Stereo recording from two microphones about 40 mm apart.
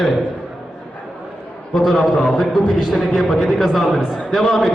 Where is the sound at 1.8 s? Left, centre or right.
Centre.